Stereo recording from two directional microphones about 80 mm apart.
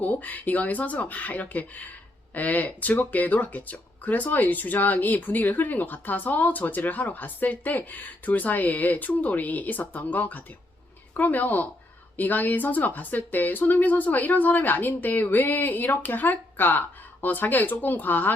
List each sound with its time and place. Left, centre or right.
0.0 s speech: left